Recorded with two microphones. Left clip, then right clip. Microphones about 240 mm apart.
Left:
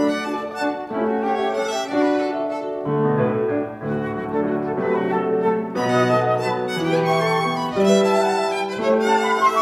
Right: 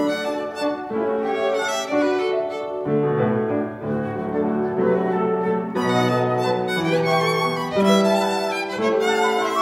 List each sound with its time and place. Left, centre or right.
2.0 s music: right
7.7 s violin: right